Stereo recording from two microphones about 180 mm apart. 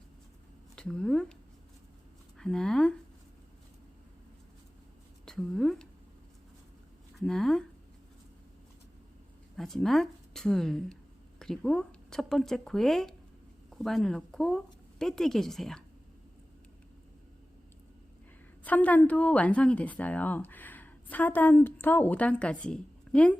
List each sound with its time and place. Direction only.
0.8 s speech: 5° left (ahead or behind)
2.4 s speech: 5° left (ahead or behind)
5.2 s a sound: centre (ahead or behind)
7.2 s speech: centre (ahead or behind)
9.6 s a woman's voice: centre (ahead or behind)
18.6 s a woman's voice: 10° left (ahead or behind)